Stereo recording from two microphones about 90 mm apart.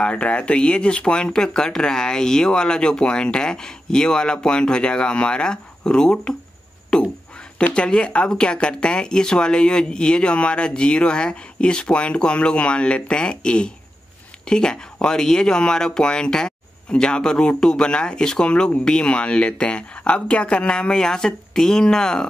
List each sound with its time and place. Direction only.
0.0 s speech: 15° left (ahead or behind)
6.9 s a sound: 5° left (ahead or behind)
7.5 s speech: 10° left (ahead or behind)